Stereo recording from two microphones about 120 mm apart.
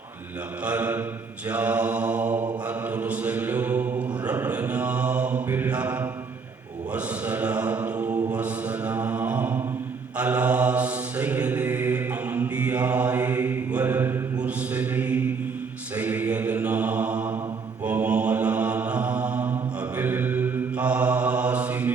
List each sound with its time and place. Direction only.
0.6 s mantra: 10° right (ahead or behind)